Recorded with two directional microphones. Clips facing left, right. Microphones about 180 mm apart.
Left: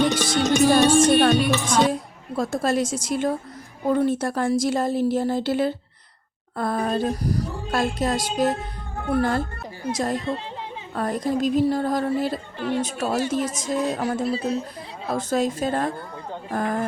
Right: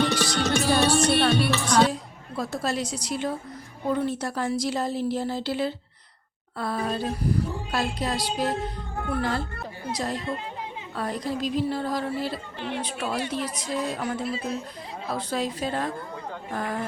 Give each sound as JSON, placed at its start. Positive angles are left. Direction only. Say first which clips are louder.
{"t": 0.9, "sound": "music", "louder": "left 5 dB", "side_deg": 50}
{"t": 1.4, "sound": "music", "louder": "left 1 dB", "side_deg": 15}
{"t": 1.9, "sound": "a woman's voice", "louder": "left 5 dB", "side_deg": 45}